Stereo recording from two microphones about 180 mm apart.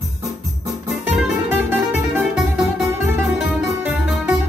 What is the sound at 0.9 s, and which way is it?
Music, centre (ahead or behind).